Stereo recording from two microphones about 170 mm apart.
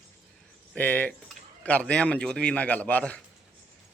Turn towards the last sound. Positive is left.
turn(degrees=10)  # may be behind; listen again after turning